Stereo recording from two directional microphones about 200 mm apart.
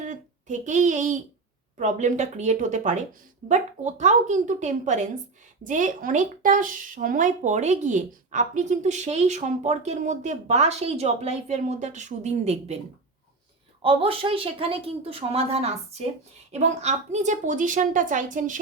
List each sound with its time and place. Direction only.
0.0 s a woman's voice: 40° right (ahead or behind)
13.8 s a woman's voice: 25° right (ahead or behind)